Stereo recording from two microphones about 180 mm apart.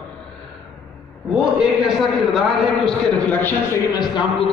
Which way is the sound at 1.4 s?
5° right (ahead or behind).